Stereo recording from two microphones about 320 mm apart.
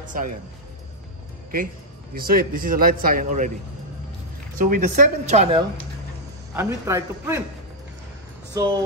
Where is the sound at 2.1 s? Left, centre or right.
Right.